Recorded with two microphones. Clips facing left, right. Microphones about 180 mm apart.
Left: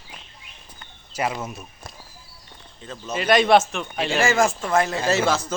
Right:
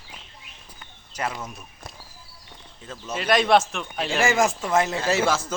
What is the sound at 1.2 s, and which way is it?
Speech, 10° left (ahead or behind).